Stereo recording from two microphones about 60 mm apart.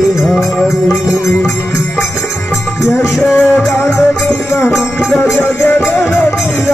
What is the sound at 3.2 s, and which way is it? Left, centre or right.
Music, left.